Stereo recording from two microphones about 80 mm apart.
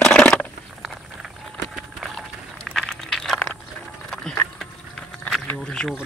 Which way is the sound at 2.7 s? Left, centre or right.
Centre.